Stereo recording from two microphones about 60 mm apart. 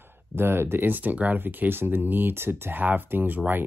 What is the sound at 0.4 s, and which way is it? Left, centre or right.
Speech, right.